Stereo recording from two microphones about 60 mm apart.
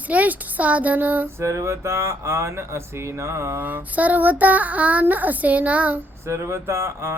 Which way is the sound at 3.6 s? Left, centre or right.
Right.